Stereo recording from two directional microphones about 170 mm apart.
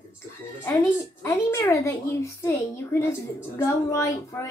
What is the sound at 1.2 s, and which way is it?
A woman's voice, 15° left (ahead or behind).